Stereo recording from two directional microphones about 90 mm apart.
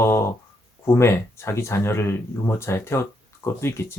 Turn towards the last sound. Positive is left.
turn(degrees=30)  # may be behind; listen again after turning